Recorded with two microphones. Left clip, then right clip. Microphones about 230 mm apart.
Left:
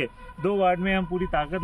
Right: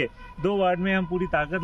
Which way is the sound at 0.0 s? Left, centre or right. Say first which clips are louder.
Right 1 dB; centre.